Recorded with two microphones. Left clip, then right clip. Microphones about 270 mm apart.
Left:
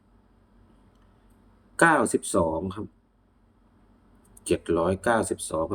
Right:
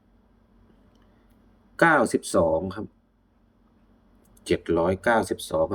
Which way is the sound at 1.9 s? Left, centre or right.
Centre.